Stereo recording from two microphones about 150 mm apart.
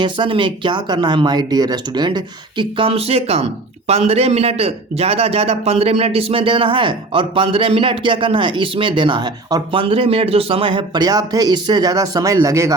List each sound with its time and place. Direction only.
0.0 s a man's voice: 30° right (ahead or behind)